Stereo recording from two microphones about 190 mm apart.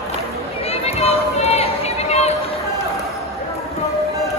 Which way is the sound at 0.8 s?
35° left (ahead or behind).